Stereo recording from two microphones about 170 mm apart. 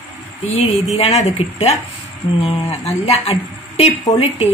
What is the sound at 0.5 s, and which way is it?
A woman's voice, 40° left (ahead or behind).